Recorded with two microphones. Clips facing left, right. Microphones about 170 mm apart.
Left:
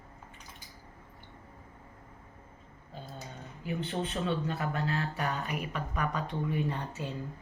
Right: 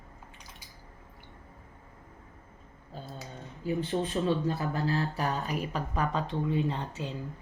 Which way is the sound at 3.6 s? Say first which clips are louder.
Right 4 dB; 35° right (ahead or behind).